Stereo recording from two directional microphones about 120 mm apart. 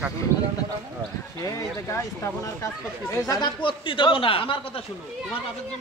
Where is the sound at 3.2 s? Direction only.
35° left (ahead or behind).